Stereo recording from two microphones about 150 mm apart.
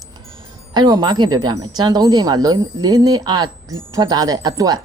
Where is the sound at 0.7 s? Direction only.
30° right (ahead or behind).